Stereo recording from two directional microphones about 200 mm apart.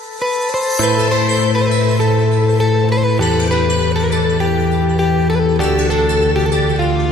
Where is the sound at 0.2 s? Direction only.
Centre (ahead or behind).